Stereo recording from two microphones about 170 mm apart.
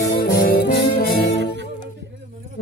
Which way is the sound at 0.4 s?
60° left (ahead or behind).